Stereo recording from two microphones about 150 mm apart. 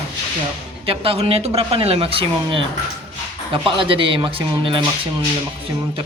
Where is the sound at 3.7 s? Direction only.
35° right (ahead or behind).